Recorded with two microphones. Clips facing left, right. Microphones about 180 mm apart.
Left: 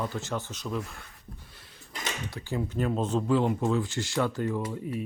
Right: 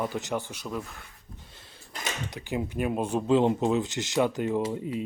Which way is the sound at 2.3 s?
15° right (ahead or behind).